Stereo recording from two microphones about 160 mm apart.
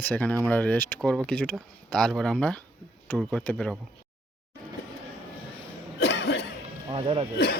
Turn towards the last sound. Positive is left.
turn(degrees=-35)  # may be behind; listen again after turning